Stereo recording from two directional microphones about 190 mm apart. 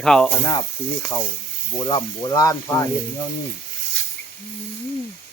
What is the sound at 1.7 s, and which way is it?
Speech, 20° left (ahead or behind).